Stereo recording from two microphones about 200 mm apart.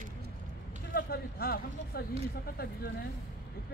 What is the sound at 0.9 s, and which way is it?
Speech, 50° left (ahead or behind).